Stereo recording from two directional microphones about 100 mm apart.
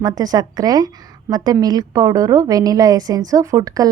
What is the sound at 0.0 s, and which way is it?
Speech, 40° right (ahead or behind).